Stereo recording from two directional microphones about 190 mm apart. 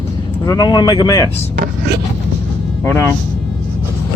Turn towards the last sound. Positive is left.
turn(degrees=10)  # may be behind; listen again after turning